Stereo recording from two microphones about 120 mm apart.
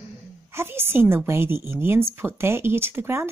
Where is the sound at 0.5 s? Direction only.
20° right (ahead or behind).